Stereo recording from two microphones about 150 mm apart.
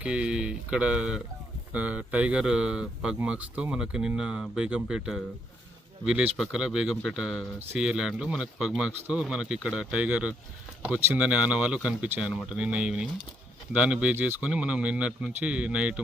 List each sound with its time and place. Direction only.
0.0 s speech: 5° right (ahead or behind)